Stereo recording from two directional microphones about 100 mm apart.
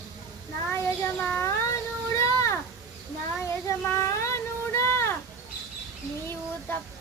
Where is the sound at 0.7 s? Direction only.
25° left (ahead or behind).